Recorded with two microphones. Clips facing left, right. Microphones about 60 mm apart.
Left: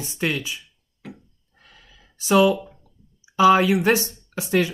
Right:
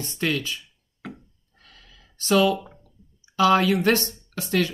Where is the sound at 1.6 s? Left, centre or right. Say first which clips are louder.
Left 1 dB; centre.